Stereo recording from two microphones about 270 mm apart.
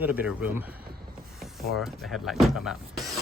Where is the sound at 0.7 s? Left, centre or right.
Right.